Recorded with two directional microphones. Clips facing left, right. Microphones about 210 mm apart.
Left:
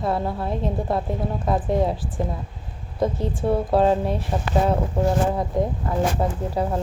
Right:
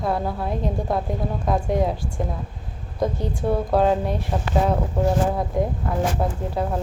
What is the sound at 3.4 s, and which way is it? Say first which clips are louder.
Speech: left 1 dB; centre (ahead or behind).